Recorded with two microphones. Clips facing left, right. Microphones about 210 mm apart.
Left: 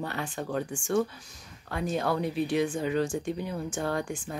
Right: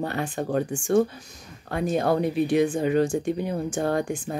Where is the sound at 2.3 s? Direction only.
15° right (ahead or behind).